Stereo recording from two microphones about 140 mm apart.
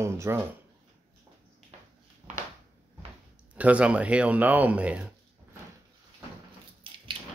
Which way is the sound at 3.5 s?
10° right (ahead or behind).